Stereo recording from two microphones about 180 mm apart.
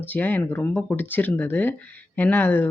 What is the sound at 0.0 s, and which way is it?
Speech, 10° left (ahead or behind).